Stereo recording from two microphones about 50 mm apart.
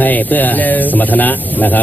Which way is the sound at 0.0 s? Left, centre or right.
Left.